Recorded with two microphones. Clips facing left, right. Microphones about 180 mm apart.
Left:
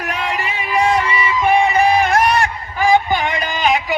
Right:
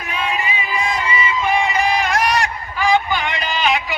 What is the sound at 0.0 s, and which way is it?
Music, 70° left (ahead or behind).